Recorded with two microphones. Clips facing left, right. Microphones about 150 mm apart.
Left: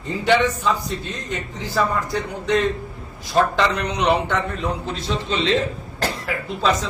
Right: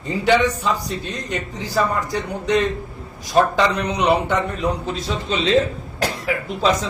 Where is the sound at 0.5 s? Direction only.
35° right (ahead or behind).